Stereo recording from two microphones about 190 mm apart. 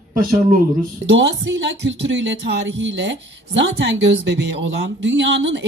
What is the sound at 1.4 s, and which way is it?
Speech, 70° right (ahead or behind).